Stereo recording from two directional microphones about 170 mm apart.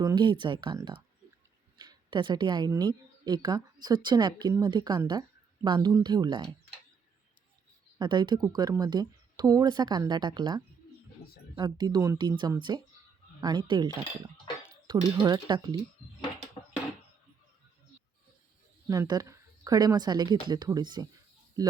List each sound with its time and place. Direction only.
0.0 s a woman's voice: 25° right (ahead or behind)
7.9 s a woman's voice: 25° right (ahead or behind)
18.9 s a woman's voice: 20° right (ahead or behind)